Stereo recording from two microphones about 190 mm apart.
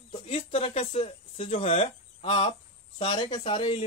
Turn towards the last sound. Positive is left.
turn(degrees=25)  # may be behind; listen again after turning